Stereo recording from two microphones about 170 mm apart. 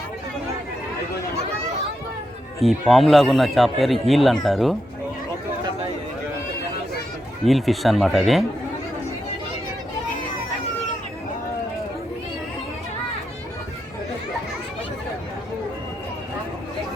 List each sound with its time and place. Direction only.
2.6 s speech: centre (ahead or behind)
7.4 s speech: centre (ahead or behind)